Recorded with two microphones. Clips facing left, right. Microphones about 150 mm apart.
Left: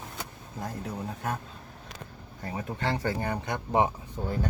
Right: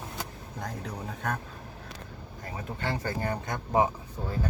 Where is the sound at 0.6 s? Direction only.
5° left (ahead or behind).